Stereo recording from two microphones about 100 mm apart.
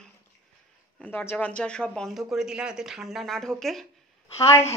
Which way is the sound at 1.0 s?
15° left (ahead or behind).